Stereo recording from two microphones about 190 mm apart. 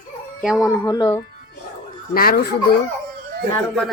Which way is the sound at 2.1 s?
50° left (ahead or behind).